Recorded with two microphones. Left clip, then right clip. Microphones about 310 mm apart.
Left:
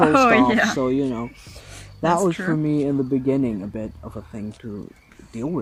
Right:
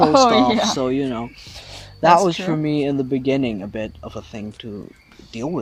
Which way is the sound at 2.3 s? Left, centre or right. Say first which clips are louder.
Right 1 dB; right.